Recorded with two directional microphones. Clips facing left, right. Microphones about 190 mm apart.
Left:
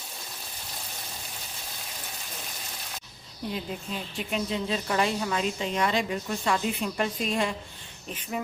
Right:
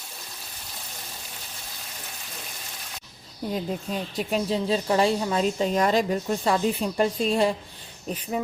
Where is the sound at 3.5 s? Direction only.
40° right (ahead or behind).